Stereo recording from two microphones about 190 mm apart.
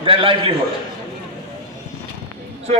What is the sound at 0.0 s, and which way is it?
Speech, 30° right (ahead or behind).